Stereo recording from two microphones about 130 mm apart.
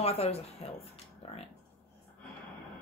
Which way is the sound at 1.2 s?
50° left (ahead or behind).